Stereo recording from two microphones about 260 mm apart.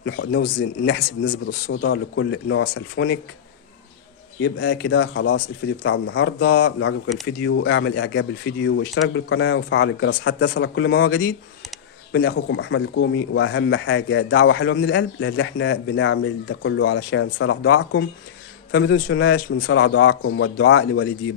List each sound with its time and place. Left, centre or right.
0.0 s speech: left
4.4 s speech: left